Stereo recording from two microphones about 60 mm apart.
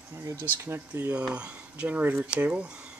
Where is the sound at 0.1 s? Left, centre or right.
Right.